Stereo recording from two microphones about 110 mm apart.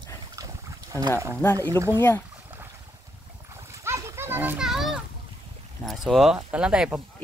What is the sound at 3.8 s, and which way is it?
Splash, 20° right (ahead or behind).